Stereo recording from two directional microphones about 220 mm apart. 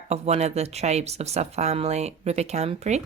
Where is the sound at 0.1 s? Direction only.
30° right (ahead or behind).